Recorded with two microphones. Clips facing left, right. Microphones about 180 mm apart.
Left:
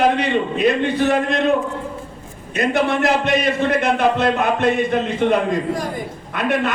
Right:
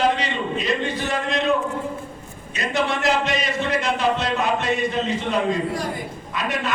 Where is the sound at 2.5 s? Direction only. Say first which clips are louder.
Left 6 dB; 55° left (ahead or behind).